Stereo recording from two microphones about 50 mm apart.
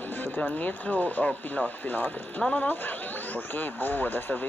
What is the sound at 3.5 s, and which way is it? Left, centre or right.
Speech, left.